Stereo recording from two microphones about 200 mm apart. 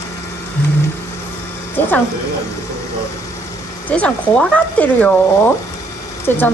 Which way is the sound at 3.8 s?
5° left (ahead or behind).